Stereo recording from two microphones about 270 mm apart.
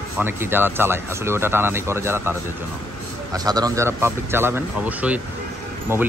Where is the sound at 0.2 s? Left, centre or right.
Centre.